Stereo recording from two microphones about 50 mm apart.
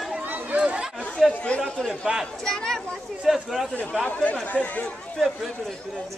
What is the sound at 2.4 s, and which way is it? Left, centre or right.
Speech, centre.